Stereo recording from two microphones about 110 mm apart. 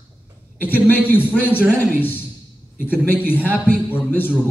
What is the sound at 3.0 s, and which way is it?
A man's voice, 20° left (ahead or behind).